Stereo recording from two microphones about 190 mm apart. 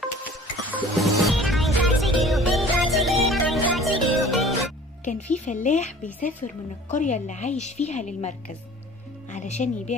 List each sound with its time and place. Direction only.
0.7 s music: centre (ahead or behind)
5.0 s a woman's voice: 40° left (ahead or behind)